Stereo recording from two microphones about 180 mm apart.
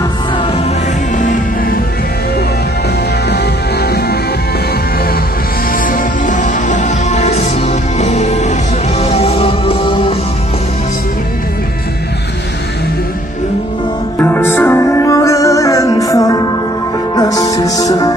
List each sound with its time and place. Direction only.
1.1 s music: 45° left (ahead or behind)
5.7 s music: 50° left (ahead or behind); by 10.1 s 30° left (ahead or behind)
14.2 s music: 10° left (ahead or behind)